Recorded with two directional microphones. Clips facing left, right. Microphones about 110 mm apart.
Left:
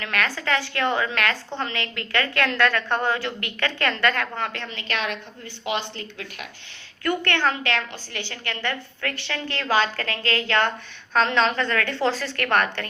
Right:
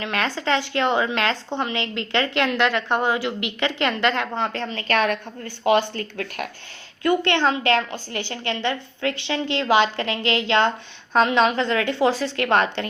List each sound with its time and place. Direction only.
0.0 s speech: 25° right (ahead or behind); by 6.5 s 50° right (ahead or behind)
7.0 s a woman's voice: 20° right (ahead or behind)